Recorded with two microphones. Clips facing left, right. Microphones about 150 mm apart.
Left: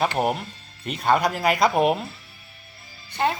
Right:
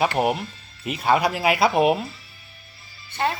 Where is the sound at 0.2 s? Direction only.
5° right (ahead or behind).